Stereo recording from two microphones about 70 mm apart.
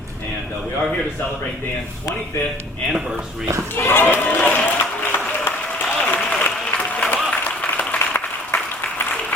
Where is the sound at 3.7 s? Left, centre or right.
Left.